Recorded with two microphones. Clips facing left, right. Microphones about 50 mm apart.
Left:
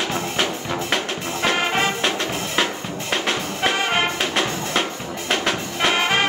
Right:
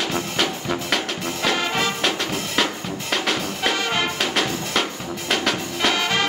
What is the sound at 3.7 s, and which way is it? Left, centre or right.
Brass instrument, left.